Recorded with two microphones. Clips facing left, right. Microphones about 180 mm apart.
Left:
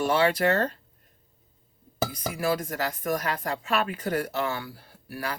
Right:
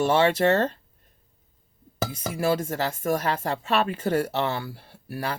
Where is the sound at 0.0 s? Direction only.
25° right (ahead or behind).